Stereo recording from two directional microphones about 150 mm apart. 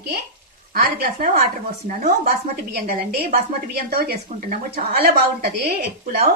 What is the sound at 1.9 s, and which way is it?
A woman's voice, 65° right (ahead or behind).